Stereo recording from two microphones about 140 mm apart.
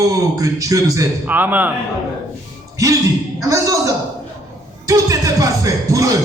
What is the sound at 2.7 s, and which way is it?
Speech, 25° right (ahead or behind).